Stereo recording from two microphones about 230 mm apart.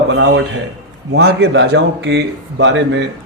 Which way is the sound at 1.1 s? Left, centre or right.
Right.